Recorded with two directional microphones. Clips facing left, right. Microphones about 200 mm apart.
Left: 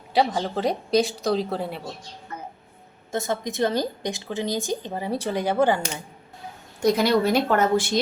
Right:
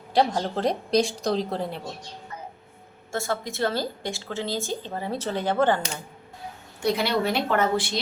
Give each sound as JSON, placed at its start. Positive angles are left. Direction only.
{"t": 0.1, "sound": "speech", "side_deg": 0}
{"t": 3.1, "sound": "a woman's voice", "side_deg": 20}
{"t": 6.8, "sound": "a woman's voice", "side_deg": 45}